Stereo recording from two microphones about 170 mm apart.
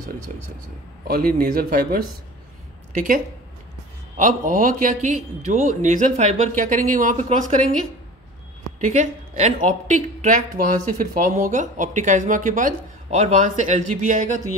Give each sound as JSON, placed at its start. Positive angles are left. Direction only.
{"t": 1.0, "sound": "speech", "side_deg": -60}
{"t": 4.2, "sound": "a woman's voice", "side_deg": -50}
{"t": 8.8, "sound": "a woman's voice", "side_deg": -45}